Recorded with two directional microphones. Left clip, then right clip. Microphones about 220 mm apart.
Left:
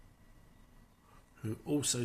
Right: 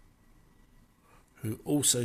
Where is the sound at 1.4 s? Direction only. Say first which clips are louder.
Right 5 dB; 35° right (ahead or behind).